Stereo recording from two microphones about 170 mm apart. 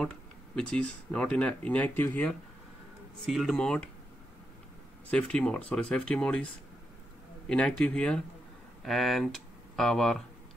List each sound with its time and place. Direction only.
0.6 s a man's voice: 5° left (ahead or behind)
5.1 s speech: 5° left (ahead or behind)
7.4 s a man's voice: 5° left (ahead or behind)